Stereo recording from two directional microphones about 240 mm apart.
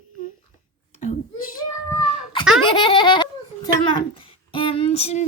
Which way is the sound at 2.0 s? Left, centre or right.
Centre.